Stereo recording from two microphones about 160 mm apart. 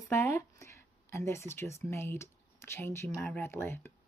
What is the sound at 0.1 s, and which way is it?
Speech, 15° left (ahead or behind).